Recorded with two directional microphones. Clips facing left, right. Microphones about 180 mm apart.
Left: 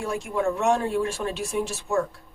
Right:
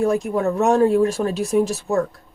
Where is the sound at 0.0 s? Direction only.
40° right (ahead or behind).